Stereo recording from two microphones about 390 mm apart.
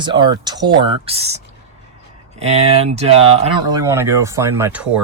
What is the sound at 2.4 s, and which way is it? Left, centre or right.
Speech, centre.